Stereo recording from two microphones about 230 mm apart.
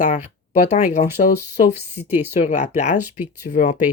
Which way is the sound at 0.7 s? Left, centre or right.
Left.